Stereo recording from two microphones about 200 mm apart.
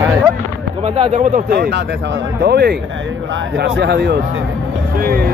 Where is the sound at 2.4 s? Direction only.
55° right (ahead or behind).